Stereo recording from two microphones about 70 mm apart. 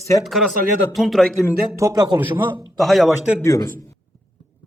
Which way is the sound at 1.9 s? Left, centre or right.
Right.